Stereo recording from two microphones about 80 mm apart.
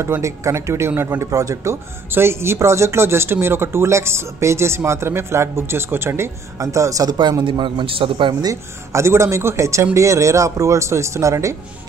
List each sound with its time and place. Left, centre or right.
0.0 s speech: right
7.4 s a man's voice: right
8.5 s speech: right